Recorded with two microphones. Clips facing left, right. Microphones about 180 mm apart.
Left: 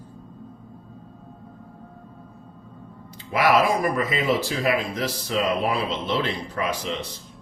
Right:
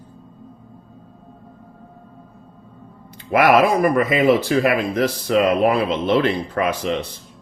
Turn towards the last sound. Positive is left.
turn(degrees=-60)  # may be behind; listen again after turning